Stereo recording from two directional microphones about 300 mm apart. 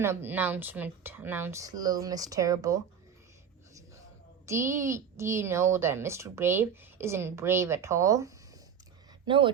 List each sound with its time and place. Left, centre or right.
0.0 s a woman's voice: centre
4.4 s a woman's voice: centre